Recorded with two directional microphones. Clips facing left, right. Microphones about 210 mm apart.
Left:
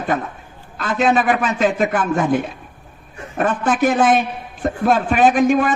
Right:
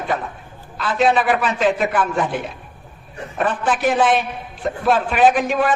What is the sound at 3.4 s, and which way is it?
A man's voice, 45° left (ahead or behind).